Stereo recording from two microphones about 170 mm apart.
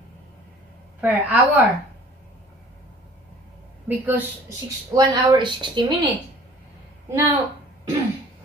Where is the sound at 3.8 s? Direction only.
10° right (ahead or behind).